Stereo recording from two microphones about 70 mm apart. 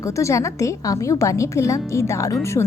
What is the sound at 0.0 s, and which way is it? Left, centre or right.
A woman's voice, left.